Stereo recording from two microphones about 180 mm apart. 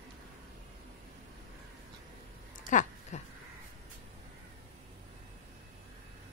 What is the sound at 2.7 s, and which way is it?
Speech, 45° left (ahead or behind).